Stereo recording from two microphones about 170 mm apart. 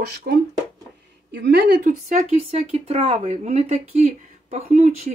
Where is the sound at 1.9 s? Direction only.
45° right (ahead or behind).